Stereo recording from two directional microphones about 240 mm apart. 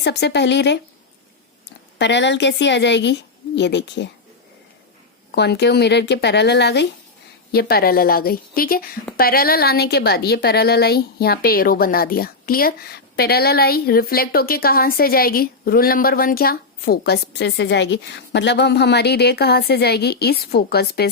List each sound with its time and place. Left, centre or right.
0.0 s a woman's voice: left
2.0 s a woman's voice: left
5.3 s a woman's voice: left